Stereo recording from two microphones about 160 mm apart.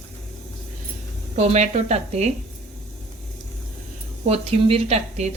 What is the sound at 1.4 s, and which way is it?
Speech, 45° right (ahead or behind).